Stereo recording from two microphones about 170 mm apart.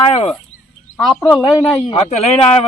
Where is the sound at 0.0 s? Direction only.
35° left (ahead or behind).